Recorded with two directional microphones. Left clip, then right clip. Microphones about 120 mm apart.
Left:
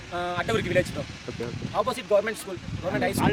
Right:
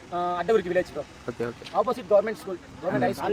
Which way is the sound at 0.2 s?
10° left (ahead or behind).